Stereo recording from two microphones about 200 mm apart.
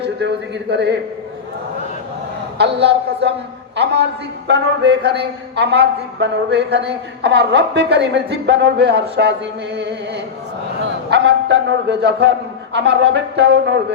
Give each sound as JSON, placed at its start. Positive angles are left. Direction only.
{"t": 0.0, "sound": "a man's voice", "side_deg": -55}
{"t": 2.8, "sound": "a man's voice", "side_deg": -60}
{"t": 4.4, "sound": "a man's voice", "side_deg": -60}
{"t": 10.8, "sound": "a man's voice", "side_deg": -60}